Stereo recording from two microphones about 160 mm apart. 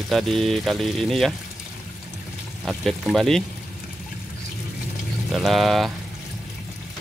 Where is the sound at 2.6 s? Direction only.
Centre (ahead or behind).